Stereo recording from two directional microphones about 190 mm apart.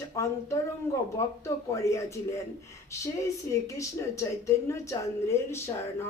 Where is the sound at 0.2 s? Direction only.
15° left (ahead or behind).